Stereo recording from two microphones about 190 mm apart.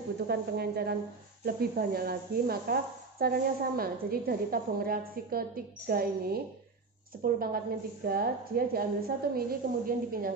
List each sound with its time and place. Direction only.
0.3 s a woman's voice: 60° right (ahead or behind)